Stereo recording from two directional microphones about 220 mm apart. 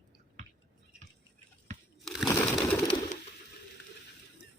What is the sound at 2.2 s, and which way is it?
Crushing, 10° left (ahead or behind).